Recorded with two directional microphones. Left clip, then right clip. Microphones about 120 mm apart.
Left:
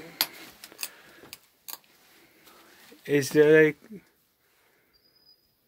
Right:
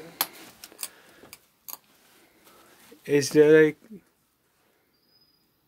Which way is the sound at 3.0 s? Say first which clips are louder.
Right 2 dB; 15° right (ahead or behind).